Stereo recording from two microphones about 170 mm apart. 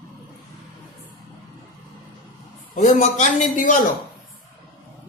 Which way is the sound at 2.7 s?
45° left (ahead or behind).